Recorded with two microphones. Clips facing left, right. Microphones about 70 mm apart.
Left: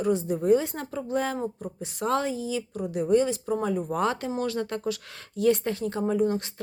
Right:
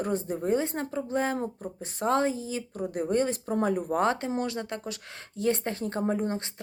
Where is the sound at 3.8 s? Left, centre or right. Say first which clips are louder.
Right 1 dB; right.